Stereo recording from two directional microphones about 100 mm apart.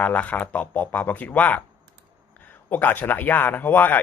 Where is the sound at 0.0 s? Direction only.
15° left (ahead or behind).